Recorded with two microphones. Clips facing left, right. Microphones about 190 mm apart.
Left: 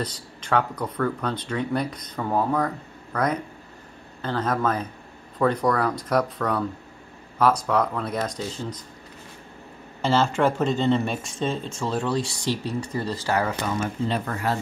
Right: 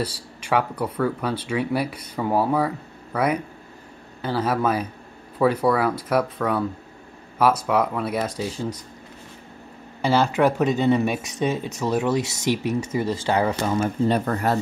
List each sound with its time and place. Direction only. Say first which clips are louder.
0.0 s speech: right 3 dB; 10° right (ahead or behind)
10.0 s speech: right 2 dB; 5° right (ahead or behind); by 13.6 s 20° right (ahead or behind)
14.0 s speech: right 5 dB; 45° right (ahead or behind)